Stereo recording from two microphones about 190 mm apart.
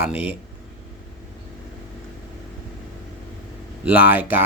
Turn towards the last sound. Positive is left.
turn(degrees=-10)  # may be behind; listen again after turning